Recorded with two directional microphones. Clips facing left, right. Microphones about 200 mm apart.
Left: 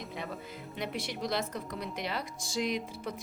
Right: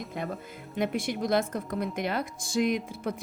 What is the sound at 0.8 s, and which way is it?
A woman's voice, 50° right (ahead or behind).